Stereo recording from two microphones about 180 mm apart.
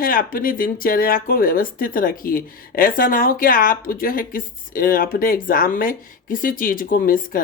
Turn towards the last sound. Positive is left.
turn(degrees=50)  # may be behind; listen again after turning